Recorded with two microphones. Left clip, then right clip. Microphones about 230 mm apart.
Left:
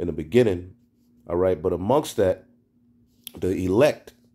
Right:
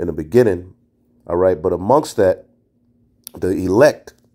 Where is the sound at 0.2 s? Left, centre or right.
Centre.